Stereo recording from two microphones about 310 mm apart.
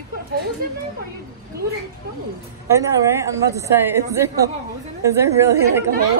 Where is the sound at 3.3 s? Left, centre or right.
Centre.